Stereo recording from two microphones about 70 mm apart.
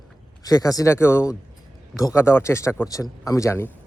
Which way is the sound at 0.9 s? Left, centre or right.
Left.